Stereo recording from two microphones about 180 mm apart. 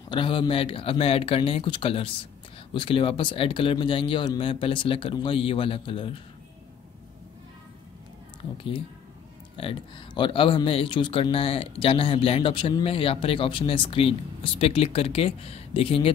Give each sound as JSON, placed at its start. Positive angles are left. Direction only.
{"t": 0.1, "sound": "speech", "side_deg": 30}
{"t": 9.6, "sound": "speech", "side_deg": 30}